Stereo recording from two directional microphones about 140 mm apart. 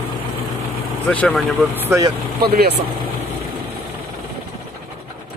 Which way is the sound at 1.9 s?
25° right (ahead or behind).